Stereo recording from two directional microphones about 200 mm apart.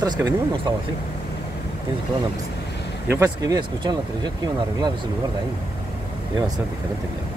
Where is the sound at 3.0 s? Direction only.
15° right (ahead or behind).